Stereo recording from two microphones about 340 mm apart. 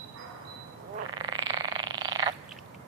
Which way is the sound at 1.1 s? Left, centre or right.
Centre.